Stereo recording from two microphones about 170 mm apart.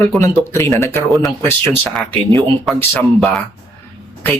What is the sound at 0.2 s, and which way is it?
Speech, 15° left (ahead or behind).